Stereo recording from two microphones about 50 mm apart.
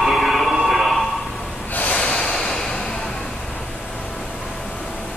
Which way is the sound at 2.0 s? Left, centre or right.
Centre.